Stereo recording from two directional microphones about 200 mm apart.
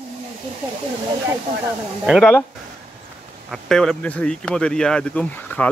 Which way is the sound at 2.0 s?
Centre (ahead or behind).